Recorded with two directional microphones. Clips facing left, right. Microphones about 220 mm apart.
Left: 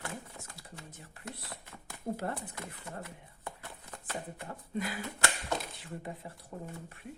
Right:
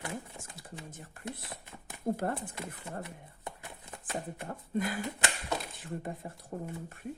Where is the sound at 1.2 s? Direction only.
20° right (ahead or behind).